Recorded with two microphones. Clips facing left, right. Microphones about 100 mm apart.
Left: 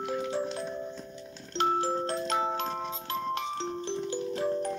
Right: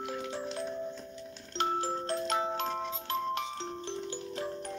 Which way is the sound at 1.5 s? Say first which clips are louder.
Left 4 dB; 35° left (ahead or behind).